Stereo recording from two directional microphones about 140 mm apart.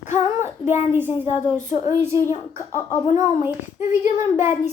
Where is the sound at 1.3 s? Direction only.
55° left (ahead or behind).